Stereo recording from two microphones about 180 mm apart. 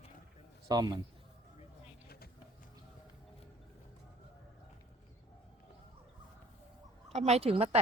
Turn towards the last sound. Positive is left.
turn(degrees=-35)  # may be behind; listen again after turning